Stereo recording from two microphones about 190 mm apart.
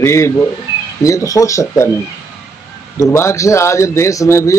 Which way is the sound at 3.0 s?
15° left (ahead or behind).